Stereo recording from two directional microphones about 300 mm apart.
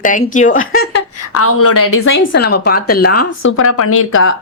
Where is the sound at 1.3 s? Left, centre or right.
Left.